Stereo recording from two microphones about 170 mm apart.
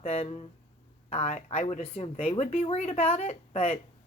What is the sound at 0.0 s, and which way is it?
A woman's voice, 40° left (ahead or behind).